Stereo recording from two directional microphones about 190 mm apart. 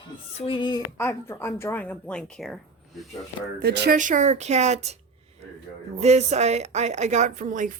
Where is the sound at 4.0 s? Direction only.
40° right (ahead or behind).